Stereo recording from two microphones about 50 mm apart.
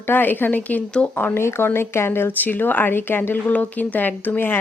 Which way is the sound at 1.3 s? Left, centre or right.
Left.